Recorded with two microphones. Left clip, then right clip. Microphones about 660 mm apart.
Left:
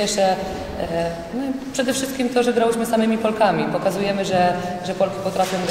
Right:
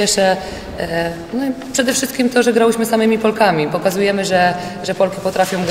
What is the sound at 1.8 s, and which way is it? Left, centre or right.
A woman's voice, right.